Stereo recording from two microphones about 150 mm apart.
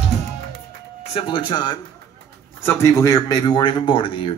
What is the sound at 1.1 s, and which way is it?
Speech, 35° left (ahead or behind).